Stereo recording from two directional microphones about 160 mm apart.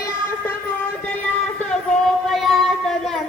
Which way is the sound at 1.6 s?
5° left (ahead or behind).